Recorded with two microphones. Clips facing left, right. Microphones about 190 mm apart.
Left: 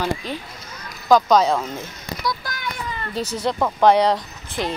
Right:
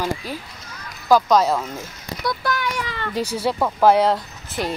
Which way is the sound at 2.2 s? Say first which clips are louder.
Right 5 dB; 60° right (ahead or behind).